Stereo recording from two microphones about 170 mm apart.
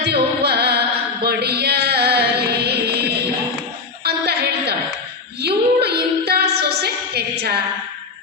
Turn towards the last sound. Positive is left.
turn(degrees=-70)  # may be behind; listen again after turning